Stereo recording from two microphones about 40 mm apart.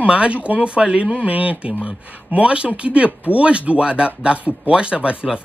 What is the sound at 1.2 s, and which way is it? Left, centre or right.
Speech, right.